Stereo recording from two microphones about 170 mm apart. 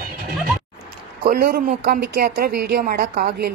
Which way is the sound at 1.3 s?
60° right (ahead or behind).